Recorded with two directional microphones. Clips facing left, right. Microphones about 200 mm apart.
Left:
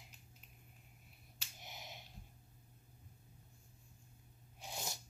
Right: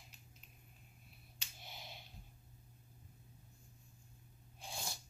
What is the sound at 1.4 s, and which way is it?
Finger snapping, 15° left (ahead or behind).